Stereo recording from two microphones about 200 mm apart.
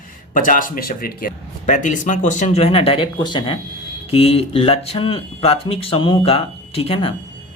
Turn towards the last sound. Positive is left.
turn(degrees=25)  # may be behind; listen again after turning